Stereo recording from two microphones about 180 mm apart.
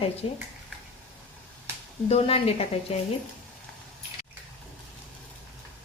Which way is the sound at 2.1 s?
35° left (ahead or behind).